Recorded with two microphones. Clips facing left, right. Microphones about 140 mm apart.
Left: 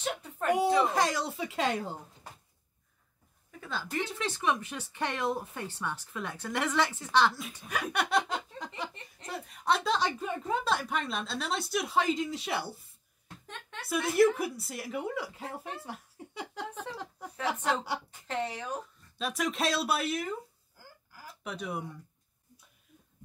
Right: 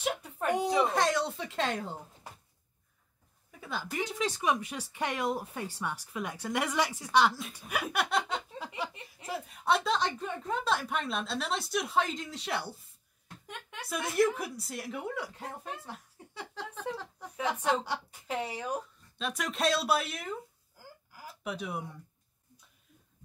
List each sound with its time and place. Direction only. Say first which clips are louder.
0.5 s a woman's voice: left 2 dB; 5° left (ahead or behind)
3.6 s speech: even; 10° right (ahead or behind)
13.7 s a woman's voice: left 3 dB; 5° left (ahead or behind)
16.3 s a sound: left 2 dB; 15° left (ahead or behind)
17.6 s a woman's voice: right 1 dB; centre (ahead or behind)
18.3 s speech: even; 10° right (ahead or behind)
19.1 s a woman's voice: left 2 dB; centre (ahead or behind)